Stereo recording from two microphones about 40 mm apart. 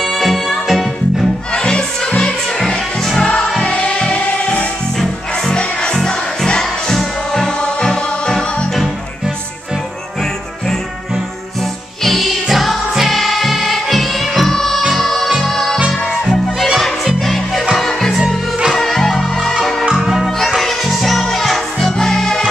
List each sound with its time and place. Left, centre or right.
0.0 s music: centre
1.5 s music: left
3.2 s music: left
6.6 s music: centre
12.0 s music: centre
19.8 s music: centre
20.2 s music: centre